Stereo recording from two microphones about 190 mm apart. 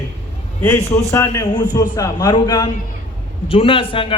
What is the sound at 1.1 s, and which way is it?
A man's voice, 15° left (ahead or behind).